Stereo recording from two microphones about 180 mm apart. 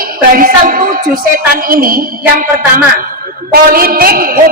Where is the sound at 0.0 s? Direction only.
50° right (ahead or behind).